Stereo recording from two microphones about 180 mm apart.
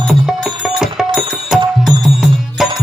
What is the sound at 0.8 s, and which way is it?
Music, centre (ahead or behind).